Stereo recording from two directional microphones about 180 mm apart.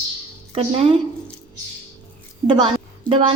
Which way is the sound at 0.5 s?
30° right (ahead or behind).